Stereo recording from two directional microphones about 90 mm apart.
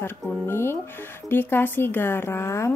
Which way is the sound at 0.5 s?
25° left (ahead or behind).